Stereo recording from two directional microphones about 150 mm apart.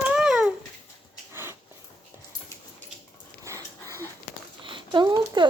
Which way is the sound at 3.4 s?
20° right (ahead or behind).